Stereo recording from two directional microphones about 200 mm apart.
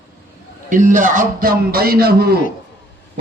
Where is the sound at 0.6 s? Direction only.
40° right (ahead or behind).